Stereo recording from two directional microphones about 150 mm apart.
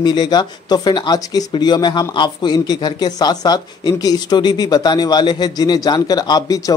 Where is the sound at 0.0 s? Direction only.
30° left (ahead or behind).